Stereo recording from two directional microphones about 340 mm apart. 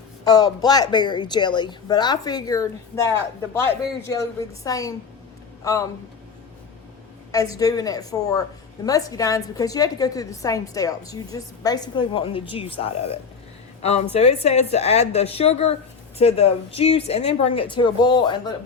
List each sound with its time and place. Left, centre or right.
0.3 s a woman's voice: centre
4.2 s a woman's voice: centre
7.5 s a woman's voice: centre